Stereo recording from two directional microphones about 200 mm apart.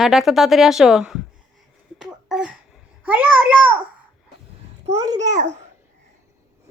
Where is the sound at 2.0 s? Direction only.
5° right (ahead or behind).